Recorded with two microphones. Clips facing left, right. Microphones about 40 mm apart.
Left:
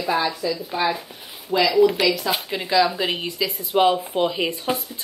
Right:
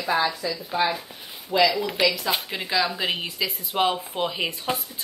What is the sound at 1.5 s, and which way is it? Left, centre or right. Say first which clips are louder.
Speech: even; left.